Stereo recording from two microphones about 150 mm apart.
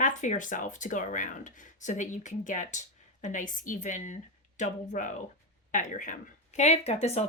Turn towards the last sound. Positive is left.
turn(degrees=45)  # may be behind; listen again after turning